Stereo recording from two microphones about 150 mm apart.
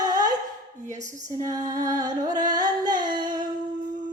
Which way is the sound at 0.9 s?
55° right (ahead or behind).